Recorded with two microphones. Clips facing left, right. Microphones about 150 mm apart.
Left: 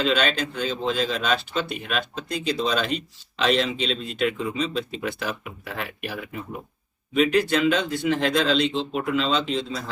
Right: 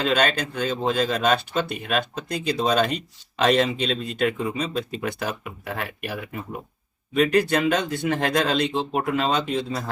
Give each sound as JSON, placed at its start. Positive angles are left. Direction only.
{"t": 0.0, "sound": "speech", "side_deg": -45}